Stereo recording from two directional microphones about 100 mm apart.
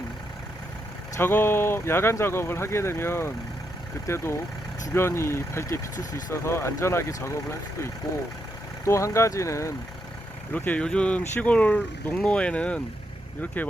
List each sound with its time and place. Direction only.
1.1 s speech: 20° left (ahead or behind)
8.8 s speech: 30° left (ahead or behind)
10.5 s speech: 15° left (ahead or behind)